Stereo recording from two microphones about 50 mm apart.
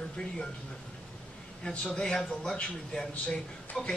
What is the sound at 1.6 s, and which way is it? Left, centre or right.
A man's voice, left.